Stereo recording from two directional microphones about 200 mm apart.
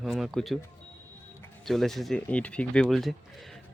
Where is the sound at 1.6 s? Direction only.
Centre (ahead or behind).